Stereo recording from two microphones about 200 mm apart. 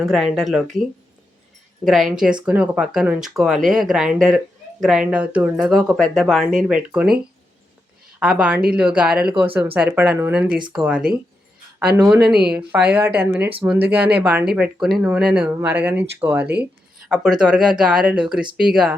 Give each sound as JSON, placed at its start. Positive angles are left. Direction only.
{"t": 0.0, "sound": "speech", "side_deg": 0}
{"t": 1.8, "sound": "speech", "side_deg": 0}
{"t": 8.2, "sound": "speech", "side_deg": -5}
{"t": 12.2, "sound": "speech", "side_deg": -50}
{"t": 12.5, "sound": "speech", "side_deg": -5}